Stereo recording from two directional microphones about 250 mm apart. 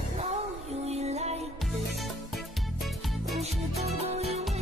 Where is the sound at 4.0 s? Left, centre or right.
Right.